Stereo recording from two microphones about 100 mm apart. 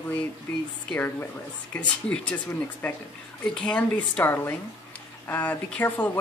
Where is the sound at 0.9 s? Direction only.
20° left (ahead or behind).